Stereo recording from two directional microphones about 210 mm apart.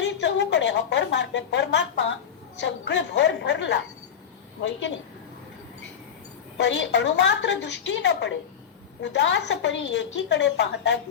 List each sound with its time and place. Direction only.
0.0 s a woman's voice: 60° left (ahead or behind)
6.6 s a woman's voice: 60° left (ahead or behind)